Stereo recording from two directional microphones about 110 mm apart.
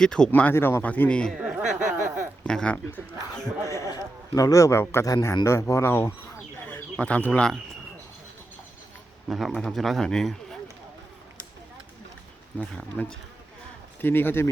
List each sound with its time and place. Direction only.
0.0 s speech: 5° left (ahead or behind)
1.3 s speech: 10° right (ahead or behind)
2.4 s speech: 10° left (ahead or behind)
3.6 s a man's voice: 25° left (ahead or behind); by 7.6 s 5° left (ahead or behind)
9.3 s speech: centre (ahead or behind)
12.5 s a man's voice: 10° left (ahead or behind)